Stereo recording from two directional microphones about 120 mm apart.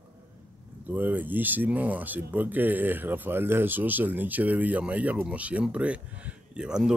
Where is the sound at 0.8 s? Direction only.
15° right (ahead or behind).